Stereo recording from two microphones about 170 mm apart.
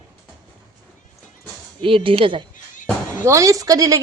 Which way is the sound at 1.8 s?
30° right (ahead or behind).